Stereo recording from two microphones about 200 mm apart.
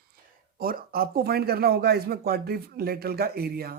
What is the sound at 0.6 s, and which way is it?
Speech, 45° right (ahead or behind).